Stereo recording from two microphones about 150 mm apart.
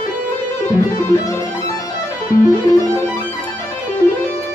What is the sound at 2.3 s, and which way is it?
Music, 25° left (ahead or behind).